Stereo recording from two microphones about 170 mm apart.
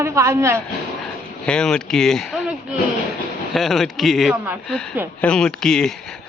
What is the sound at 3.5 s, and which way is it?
Speech, centre (ahead or behind).